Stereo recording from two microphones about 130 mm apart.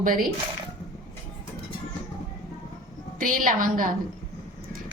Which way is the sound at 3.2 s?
90° right.